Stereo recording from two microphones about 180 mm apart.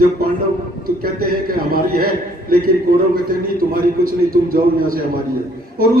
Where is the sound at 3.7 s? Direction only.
55° right (ahead or behind).